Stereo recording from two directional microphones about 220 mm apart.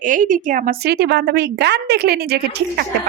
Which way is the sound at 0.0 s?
35° right (ahead or behind).